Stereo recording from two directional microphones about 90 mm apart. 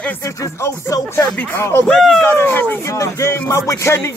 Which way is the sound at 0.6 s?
35° left (ahead or behind).